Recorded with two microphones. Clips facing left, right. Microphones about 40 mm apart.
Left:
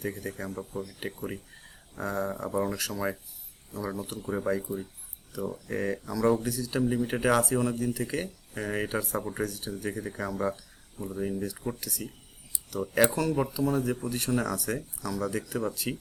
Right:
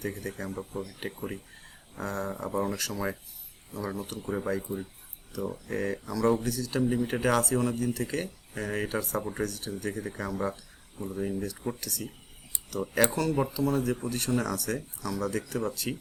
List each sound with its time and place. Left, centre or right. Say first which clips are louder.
0.0 s speech: even; centre
0.7 s speech: even; right
2.0 s speech: left 2 dB; centre
4.3 s speech: left 2 dB; centre